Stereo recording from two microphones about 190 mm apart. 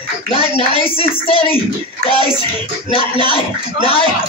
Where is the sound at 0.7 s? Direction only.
30° left (ahead or behind).